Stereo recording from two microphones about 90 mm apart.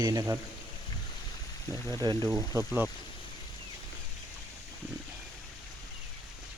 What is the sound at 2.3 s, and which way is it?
Speech, 35° right (ahead or behind).